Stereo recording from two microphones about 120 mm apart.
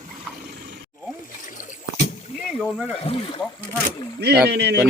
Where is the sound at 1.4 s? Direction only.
90° left.